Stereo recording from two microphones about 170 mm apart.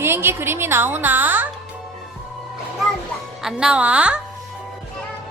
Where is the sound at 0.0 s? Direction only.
15° right (ahead or behind).